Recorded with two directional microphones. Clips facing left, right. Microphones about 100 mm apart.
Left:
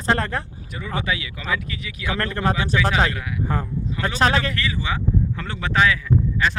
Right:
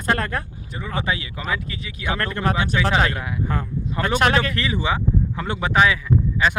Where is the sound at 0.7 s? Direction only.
30° right (ahead or behind).